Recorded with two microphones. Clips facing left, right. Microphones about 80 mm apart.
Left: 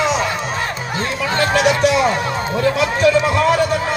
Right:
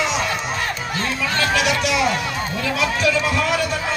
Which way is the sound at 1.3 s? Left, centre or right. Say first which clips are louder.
Left 5 dB; left.